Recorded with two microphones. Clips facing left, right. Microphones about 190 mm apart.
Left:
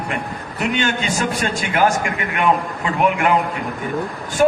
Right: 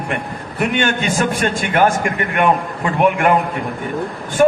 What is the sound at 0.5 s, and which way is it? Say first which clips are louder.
A man's voice: right 3 dB; 50° right (ahead or behind).